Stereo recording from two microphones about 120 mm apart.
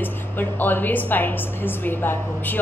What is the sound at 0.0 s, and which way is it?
A woman's voice, 15° left (ahead or behind).